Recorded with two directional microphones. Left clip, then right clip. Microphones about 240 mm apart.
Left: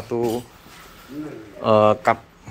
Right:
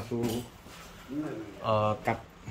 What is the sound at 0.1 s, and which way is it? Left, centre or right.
Speech, left.